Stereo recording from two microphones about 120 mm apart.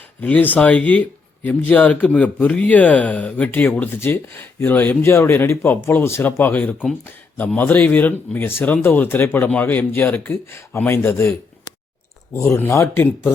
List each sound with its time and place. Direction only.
0.2 s a man's voice: 15° left (ahead or behind)
12.3 s speech: 20° left (ahead or behind)